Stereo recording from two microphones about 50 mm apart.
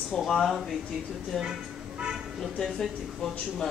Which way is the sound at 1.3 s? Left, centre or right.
Centre.